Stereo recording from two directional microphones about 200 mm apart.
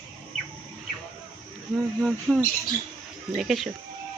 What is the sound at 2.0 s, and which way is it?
Speech, centre (ahead or behind).